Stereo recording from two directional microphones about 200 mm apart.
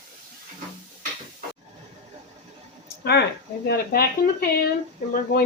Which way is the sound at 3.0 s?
55° left (ahead or behind).